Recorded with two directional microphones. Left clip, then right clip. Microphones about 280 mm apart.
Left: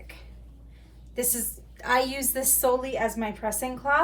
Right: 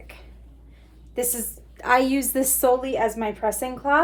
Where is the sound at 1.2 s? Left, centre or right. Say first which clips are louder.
Right 3 dB; right.